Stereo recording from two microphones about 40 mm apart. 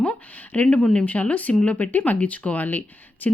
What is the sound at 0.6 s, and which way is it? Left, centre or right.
Speech, left.